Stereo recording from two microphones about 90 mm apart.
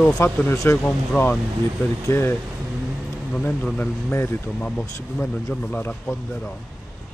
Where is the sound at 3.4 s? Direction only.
20° left (ahead or behind).